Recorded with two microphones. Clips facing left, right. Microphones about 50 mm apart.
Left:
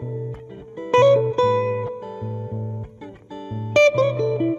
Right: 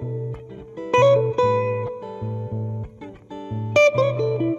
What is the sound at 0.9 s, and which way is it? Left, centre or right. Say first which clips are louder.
Music: left 1 dB; right.